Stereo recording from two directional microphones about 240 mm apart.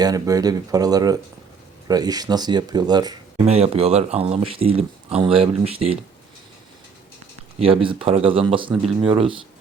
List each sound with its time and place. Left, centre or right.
0.0 s speech: centre
3.4 s speech: right
7.6 s speech: right